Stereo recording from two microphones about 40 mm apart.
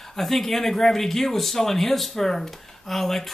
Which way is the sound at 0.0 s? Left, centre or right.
Centre.